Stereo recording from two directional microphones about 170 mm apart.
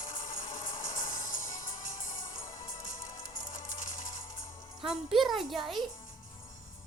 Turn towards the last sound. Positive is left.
turn(degrees=0)  # may be behind; listen again after turning